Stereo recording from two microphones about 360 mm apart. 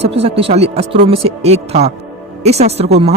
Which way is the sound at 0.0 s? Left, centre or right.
Centre.